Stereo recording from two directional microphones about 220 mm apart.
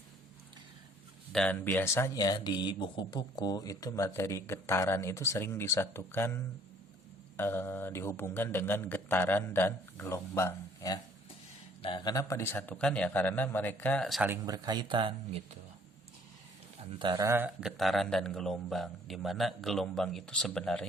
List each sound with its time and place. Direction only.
1.3 s speech: 5° left (ahead or behind)
14.4 s speech: 15° right (ahead or behind)
17.0 s speech: 20° right (ahead or behind); by 20.8 s 5° left (ahead or behind)